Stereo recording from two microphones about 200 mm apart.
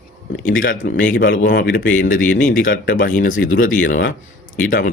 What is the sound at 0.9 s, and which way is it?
Speech, 40° left (ahead or behind).